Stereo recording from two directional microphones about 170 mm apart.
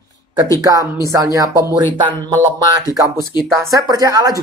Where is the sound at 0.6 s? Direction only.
20° right (ahead or behind).